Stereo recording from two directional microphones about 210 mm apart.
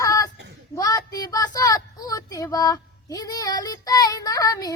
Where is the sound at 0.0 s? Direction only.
15° left (ahead or behind).